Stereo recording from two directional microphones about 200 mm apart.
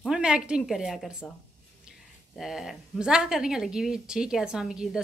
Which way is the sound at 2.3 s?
Centre (ahead or behind).